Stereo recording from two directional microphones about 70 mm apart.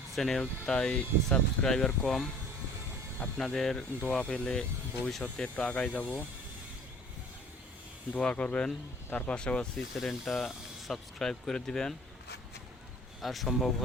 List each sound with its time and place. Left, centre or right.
0.1 s speech: centre
3.3 s speech: centre
8.1 s speech: centre
13.2 s speech: centre